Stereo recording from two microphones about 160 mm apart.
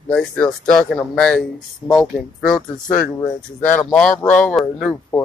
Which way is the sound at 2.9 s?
15° left (ahead or behind).